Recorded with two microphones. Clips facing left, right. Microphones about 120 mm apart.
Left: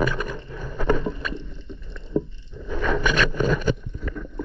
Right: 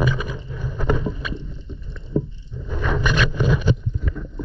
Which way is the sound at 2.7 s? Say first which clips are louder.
Even; 10° right (ahead or behind).